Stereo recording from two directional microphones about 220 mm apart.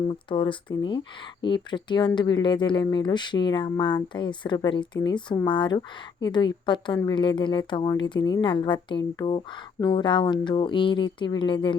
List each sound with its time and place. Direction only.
0.1 s a woman's voice: 20° left (ahead or behind)